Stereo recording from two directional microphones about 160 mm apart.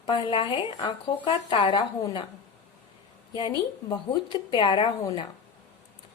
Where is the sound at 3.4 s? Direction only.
30° left (ahead or behind).